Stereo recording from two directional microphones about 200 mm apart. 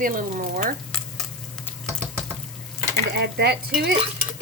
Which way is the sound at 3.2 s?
55° right (ahead or behind).